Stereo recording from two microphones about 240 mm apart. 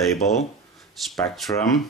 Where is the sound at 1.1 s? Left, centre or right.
Centre.